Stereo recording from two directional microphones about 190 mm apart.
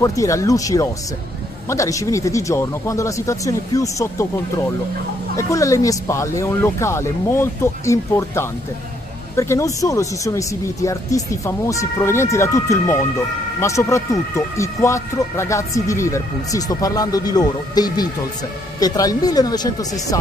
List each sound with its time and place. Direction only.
0.0 s speech: 15° left (ahead or behind)